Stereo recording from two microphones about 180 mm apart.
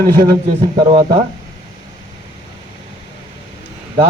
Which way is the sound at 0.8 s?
30° right (ahead or behind).